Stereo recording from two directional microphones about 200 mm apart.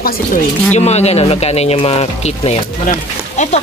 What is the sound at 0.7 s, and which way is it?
Speech, 35° left (ahead or behind).